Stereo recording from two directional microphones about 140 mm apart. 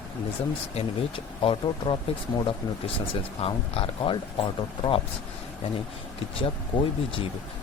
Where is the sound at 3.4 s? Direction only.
40° left (ahead or behind).